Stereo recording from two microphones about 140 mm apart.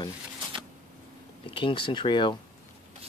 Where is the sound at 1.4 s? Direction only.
35° left (ahead or behind).